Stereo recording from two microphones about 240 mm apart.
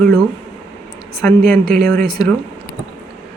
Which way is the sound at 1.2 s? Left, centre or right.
Centre.